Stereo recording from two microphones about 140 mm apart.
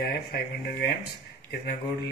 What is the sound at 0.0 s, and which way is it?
Speech, 90° left.